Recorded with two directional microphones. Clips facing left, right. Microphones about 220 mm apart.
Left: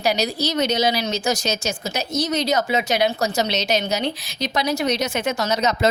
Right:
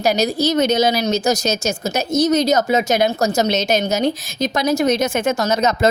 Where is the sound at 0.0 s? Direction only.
45° right (ahead or behind).